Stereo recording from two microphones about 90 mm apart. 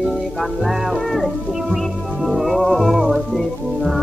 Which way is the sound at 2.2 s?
Centre (ahead or behind).